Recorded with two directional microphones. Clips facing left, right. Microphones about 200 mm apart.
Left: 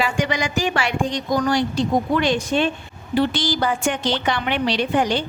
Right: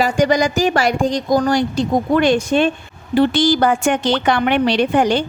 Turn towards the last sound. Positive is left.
turn(degrees=-50)  # may be behind; listen again after turning